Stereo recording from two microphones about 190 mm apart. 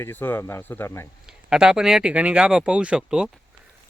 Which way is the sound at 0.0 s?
10° left (ahead or behind).